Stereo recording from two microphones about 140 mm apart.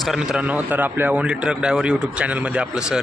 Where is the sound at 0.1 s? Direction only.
10° right (ahead or behind).